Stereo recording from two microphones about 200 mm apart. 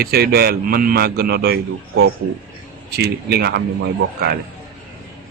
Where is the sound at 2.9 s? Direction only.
55° right (ahead or behind).